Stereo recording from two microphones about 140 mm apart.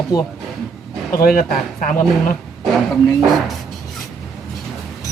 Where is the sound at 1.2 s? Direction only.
85° left.